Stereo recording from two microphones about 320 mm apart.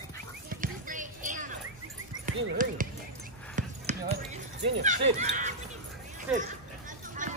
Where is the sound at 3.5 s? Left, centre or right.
Right.